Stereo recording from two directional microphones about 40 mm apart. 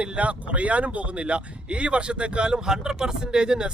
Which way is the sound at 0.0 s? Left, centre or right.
Right.